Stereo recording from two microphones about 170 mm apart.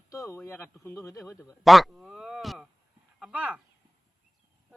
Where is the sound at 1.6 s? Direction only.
Centre (ahead or behind).